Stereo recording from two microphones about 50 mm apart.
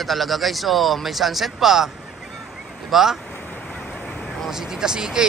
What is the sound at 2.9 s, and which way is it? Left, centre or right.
Speech, centre.